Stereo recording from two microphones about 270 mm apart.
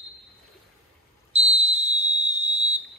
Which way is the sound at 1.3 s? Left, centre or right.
Right.